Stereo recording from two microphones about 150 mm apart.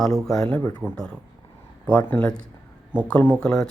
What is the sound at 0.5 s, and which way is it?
Speech, 25° left (ahead or behind).